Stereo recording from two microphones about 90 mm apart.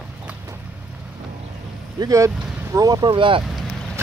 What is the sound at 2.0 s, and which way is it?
Speech, 55° right (ahead or behind).